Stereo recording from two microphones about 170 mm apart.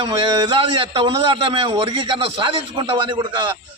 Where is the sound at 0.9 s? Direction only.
30° right (ahead or behind).